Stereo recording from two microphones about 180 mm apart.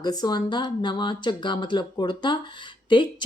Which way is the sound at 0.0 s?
20° left (ahead or behind).